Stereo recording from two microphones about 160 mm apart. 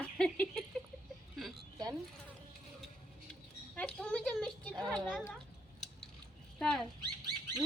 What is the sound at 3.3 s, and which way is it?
Speech, 5° left (ahead or behind).